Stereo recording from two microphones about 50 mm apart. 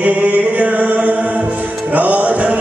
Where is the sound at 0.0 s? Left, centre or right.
Right.